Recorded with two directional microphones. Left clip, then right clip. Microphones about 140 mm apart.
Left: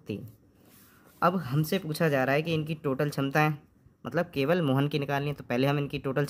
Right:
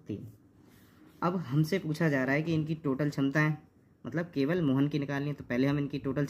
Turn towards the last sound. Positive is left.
turn(degrees=60)  # may be behind; listen again after turning